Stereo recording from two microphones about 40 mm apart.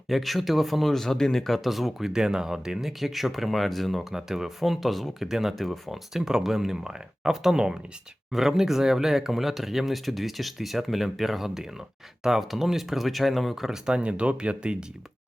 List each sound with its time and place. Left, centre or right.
0.1 s speech: centre
0.9 s speech: centre
4.1 s speech: centre
5.2 s speech: centre
5.6 s speech: centre
6.1 s speech: centre
13.8 s speech: right